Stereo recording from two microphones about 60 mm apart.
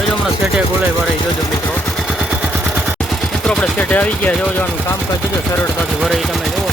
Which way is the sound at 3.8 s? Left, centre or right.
Left.